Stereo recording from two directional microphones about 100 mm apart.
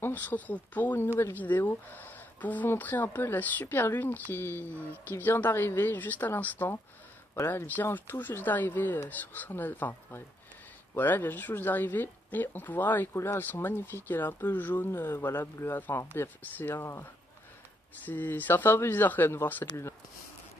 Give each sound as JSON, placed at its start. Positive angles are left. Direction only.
{"t": 0.0, "sound": "speech", "side_deg": 15}